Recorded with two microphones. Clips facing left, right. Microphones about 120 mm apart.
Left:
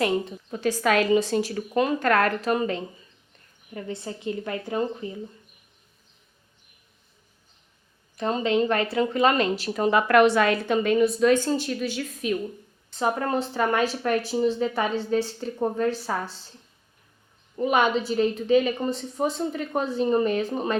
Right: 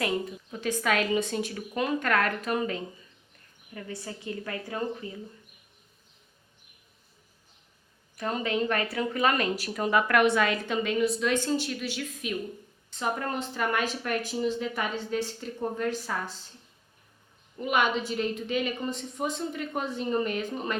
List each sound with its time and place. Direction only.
0.6 s a woman's voice: 35° left (ahead or behind)
8.1 s speech: 25° left (ahead or behind)
10.3 s a woman's voice: 40° left (ahead or behind)
10.7 s a woman's voice: 50° left (ahead or behind); by 16.3 s 30° left (ahead or behind)
17.6 s a woman's voice: 35° left (ahead or behind)